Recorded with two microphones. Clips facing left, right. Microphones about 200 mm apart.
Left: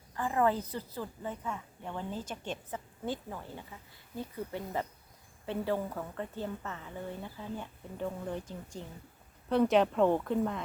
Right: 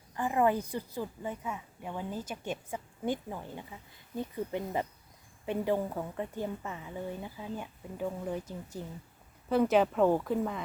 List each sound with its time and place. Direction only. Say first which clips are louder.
0.2 s a woman's voice: right 2 dB; 15° right (ahead or behind)